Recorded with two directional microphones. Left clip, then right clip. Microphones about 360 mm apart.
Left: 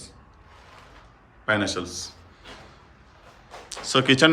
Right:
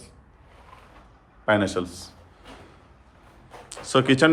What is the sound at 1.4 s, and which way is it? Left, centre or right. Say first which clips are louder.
Speech: right 2 dB; centre.